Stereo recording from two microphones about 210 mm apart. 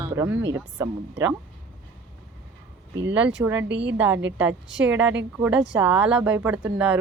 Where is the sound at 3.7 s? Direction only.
55° right (ahead or behind).